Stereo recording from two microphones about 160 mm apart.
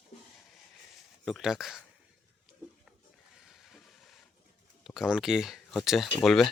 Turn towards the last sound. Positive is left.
turn(degrees=0)  # may be behind; listen again after turning